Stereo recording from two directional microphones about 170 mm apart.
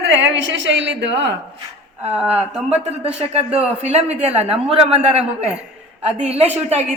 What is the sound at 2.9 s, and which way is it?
A woman's voice, 35° right (ahead or behind).